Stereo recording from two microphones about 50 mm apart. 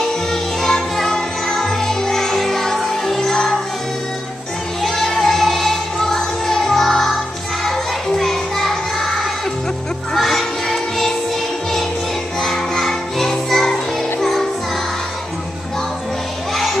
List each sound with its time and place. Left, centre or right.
0.3 s music: centre
4.8 s music: centre
12.4 s music: centre